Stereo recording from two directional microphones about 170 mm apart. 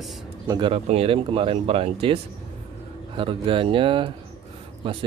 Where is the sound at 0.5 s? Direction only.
30° right (ahead or behind).